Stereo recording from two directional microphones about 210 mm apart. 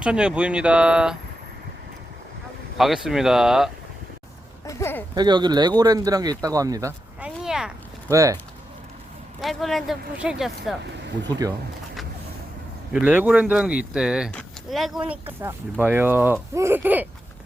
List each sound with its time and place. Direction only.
0.0 s speech: 5° right (ahead or behind)
2.7 s speech: centre (ahead or behind)
4.6 s speech: 15° left (ahead or behind)
5.1 s speech: 20° right (ahead or behind)
7.3 s a sound: 5° right (ahead or behind)
8.1 s speech: 15° right (ahead or behind)
9.4 s speech: centre (ahead or behind)
11.3 s speech: 15° right (ahead or behind)
12.9 s speech: 5° right (ahead or behind)